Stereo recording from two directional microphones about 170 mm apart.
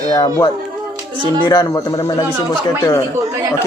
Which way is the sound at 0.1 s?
25° left (ahead or behind).